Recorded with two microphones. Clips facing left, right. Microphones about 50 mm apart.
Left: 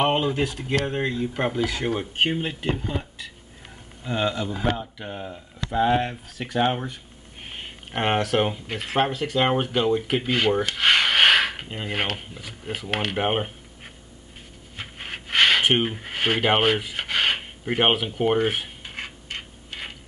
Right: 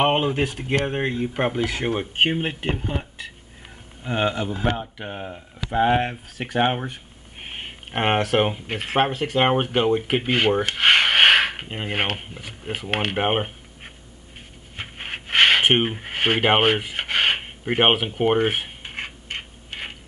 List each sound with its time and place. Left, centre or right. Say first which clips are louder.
0.0 s speech: right 2 dB; right
10.6 s rub: right 2 dB; right
14.8 s a sound: right 2 dB; right